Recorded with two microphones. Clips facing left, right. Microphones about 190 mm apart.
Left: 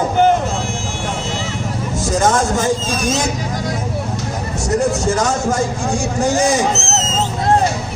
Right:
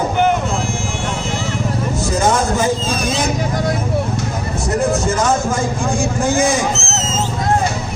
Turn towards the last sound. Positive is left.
turn(degrees=40)  # may be behind; listen again after turning